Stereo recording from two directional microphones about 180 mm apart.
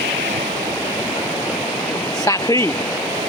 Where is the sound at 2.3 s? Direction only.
15° left (ahead or behind).